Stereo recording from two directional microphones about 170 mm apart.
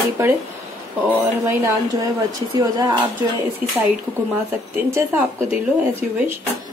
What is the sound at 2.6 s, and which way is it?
Speech, 20° right (ahead or behind).